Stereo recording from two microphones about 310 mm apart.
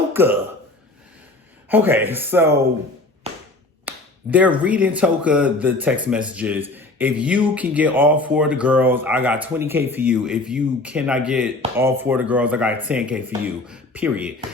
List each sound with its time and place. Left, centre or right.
0.1 s speech: centre
1.7 s speech: centre
3.3 s a sound: centre
3.8 s speech: centre